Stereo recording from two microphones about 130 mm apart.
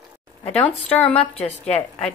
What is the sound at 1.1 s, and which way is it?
Speech, 50° left (ahead or behind).